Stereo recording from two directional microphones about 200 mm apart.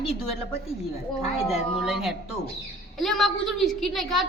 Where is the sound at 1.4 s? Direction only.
Centre (ahead or behind).